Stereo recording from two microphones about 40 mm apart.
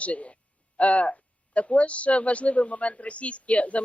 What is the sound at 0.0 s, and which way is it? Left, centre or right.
Speech, left.